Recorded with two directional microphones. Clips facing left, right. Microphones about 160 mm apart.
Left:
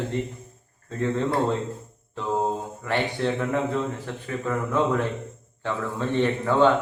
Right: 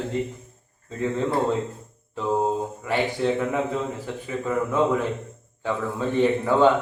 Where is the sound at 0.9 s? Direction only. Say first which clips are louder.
Even; 5° right (ahead or behind).